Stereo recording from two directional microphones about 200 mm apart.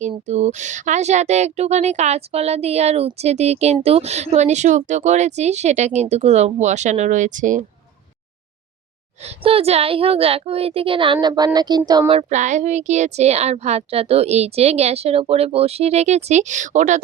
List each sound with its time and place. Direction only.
0.1 s speech: 35° right (ahead or behind)
9.2 s a woman's voice: 30° right (ahead or behind)